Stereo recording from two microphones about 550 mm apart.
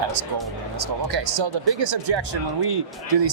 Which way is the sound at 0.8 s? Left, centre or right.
Right.